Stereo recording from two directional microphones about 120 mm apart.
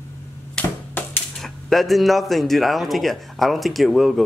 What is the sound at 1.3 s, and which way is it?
Speech, centre (ahead or behind).